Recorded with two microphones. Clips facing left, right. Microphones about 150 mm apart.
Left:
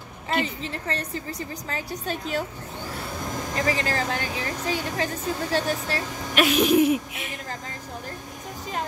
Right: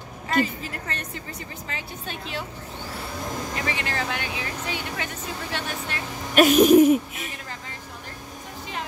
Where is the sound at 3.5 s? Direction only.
40° left (ahead or behind).